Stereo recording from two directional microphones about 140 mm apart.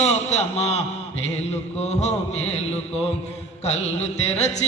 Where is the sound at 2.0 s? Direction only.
50° left (ahead or behind).